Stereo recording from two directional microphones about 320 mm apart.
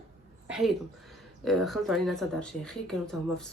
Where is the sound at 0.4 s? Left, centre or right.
Centre.